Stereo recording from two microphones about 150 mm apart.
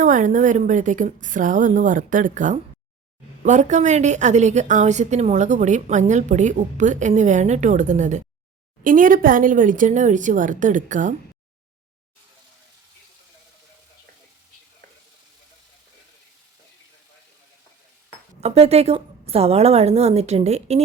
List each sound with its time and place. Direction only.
0.0 s a woman's voice: 55° right (ahead or behind)
8.8 s a woman's voice: 65° right (ahead or behind)
18.3 s a woman's voice: 45° right (ahead or behind)